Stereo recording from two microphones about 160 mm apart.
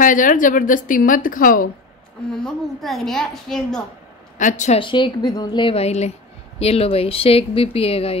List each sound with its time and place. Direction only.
0.0 s a woman's voice: 55° left (ahead or behind)
2.3 s a woman's voice: centre (ahead or behind)
4.4 s a woman's voice: 50° left (ahead or behind)
4.7 s speech: 30° left (ahead or behind)